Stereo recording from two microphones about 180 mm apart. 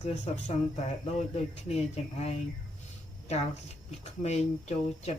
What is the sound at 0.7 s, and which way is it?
Speech, 35° left (ahead or behind).